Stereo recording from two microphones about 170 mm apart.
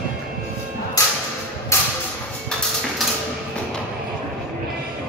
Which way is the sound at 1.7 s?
15° left (ahead or behind).